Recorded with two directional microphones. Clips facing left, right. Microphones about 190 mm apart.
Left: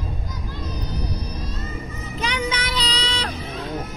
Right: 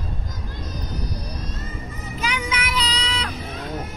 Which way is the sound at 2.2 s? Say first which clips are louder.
Left 2 dB; 35° left (ahead or behind).